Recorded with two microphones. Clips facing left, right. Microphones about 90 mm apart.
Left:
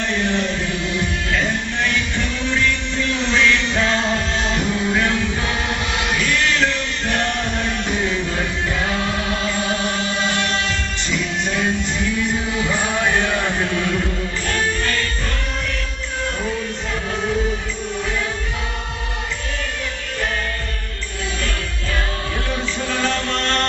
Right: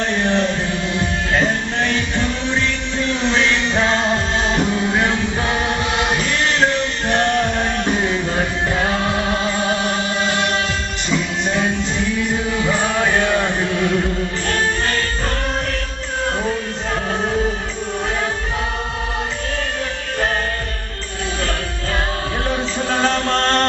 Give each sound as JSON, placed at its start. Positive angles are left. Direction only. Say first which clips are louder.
{"t": 0.1, "sound": "music", "louder": "right 2 dB", "side_deg": -30}
{"t": 14.5, "sound": "music", "louder": "right 1 dB", "side_deg": -35}
{"t": 22.8, "sound": "music", "louder": "right 5 dB", "side_deg": -35}